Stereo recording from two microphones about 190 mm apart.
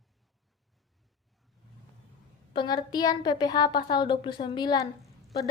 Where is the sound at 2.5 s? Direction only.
25° left (ahead or behind).